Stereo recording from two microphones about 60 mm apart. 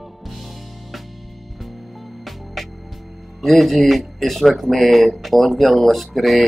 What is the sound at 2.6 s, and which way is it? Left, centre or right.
Music, centre.